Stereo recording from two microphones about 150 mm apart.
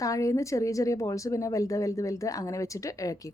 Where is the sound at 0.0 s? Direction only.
20° left (ahead or behind).